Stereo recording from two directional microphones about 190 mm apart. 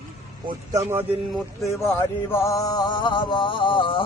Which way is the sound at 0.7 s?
10° right (ahead or behind).